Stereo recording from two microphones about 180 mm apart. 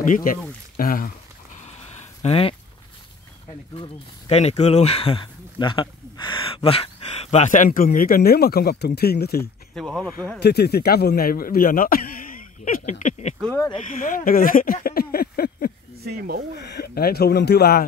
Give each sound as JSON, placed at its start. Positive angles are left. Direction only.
{"t": 0.0, "sound": "speech", "side_deg": 50}
{"t": 0.7, "sound": "a sound", "side_deg": 55}
{"t": 2.2, "sound": "speech", "side_deg": 30}
{"t": 3.7, "sound": "speech", "side_deg": 35}
{"t": 9.8, "sound": "speech", "side_deg": 5}
{"t": 10.4, "sound": "speech", "side_deg": 65}
{"t": 13.0, "sound": "a sound", "side_deg": 40}
{"t": 13.4, "sound": "speech", "side_deg": 10}
{"t": 13.8, "sound": "speech", "side_deg": 50}
{"t": 16.0, "sound": "speech", "side_deg": -60}
{"t": 16.5, "sound": "speech", "side_deg": 65}